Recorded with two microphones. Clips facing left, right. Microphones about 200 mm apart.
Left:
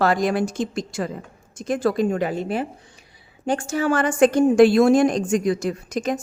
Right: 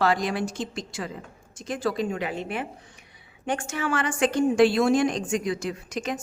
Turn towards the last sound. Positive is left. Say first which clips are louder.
# left 6 dB
turn(degrees=40)  # may be behind; listen again after turning